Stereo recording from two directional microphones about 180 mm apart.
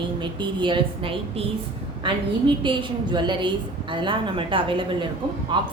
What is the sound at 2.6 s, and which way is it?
A woman's voice, 25° right (ahead or behind).